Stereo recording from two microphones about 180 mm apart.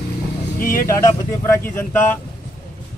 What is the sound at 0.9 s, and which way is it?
Speech, 15° left (ahead or behind).